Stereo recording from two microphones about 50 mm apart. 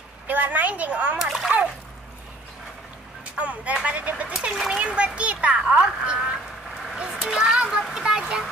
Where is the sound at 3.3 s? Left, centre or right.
Right.